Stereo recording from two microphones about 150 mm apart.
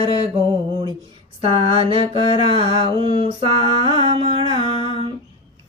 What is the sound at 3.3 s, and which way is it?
Mantra, 40° right (ahead or behind).